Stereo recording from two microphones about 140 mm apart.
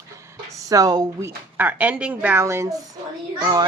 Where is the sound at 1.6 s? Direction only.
10° right (ahead or behind); by 3.6 s 30° right (ahead or behind).